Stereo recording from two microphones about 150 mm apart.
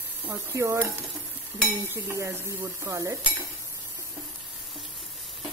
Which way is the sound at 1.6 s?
15° right (ahead or behind).